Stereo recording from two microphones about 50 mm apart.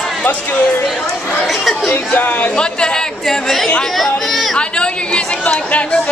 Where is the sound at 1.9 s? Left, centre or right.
Left.